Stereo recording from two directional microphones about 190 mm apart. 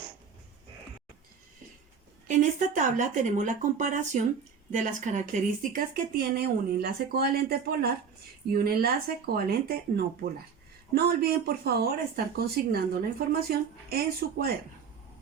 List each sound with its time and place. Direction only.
2.2 s speech: 40° right (ahead or behind)